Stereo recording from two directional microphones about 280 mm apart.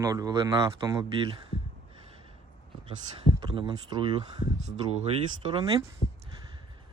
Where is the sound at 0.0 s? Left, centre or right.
Centre.